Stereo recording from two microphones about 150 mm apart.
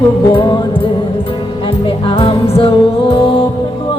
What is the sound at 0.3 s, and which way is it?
Music, 30° left (ahead or behind).